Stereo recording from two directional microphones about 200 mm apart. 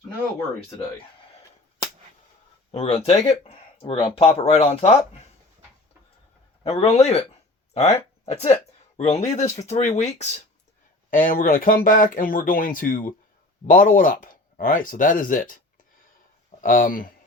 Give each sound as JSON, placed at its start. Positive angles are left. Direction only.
{"t": 2.7, "sound": "speech", "side_deg": 30}
{"t": 6.6, "sound": "speech", "side_deg": 30}
{"t": 16.6, "sound": "speech", "side_deg": 45}